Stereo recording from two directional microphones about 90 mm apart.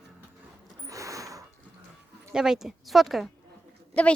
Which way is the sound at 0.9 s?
40° right (ahead or behind).